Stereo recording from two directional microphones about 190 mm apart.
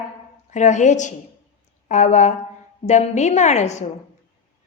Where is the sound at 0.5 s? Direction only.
40° left (ahead or behind).